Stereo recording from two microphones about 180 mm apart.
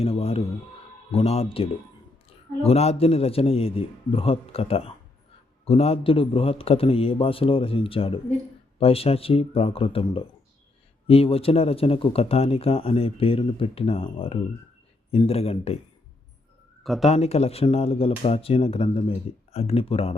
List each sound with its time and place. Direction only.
0.0 s music: 35° left (ahead or behind)
1.1 s speech: 35° left (ahead or behind)
2.6 s speech: 35° left (ahead or behind)
16.8 s speech: centre (ahead or behind)
17.1 s speech: 35° left (ahead or behind)